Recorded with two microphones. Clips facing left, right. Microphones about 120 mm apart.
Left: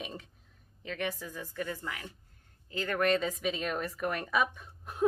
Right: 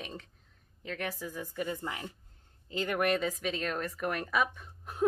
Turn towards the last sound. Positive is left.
turn(degrees=0)  # may be behind; listen again after turning